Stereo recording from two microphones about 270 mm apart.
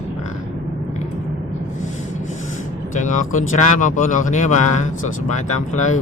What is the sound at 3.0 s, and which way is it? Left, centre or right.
Speech, left.